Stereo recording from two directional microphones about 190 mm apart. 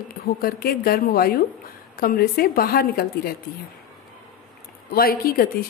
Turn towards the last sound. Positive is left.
turn(degrees=50)  # may be behind; listen again after turning